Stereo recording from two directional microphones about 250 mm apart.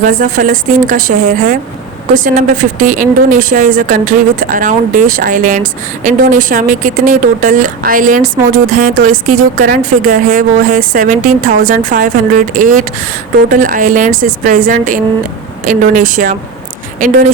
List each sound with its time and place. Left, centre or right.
0.0 s speech: right